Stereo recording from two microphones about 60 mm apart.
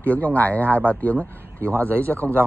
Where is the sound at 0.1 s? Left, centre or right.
Left.